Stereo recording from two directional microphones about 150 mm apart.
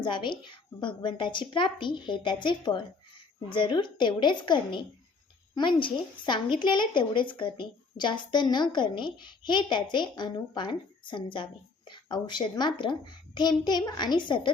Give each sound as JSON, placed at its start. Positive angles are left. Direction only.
{"t": 0.0, "sound": "a woman's voice", "side_deg": 30}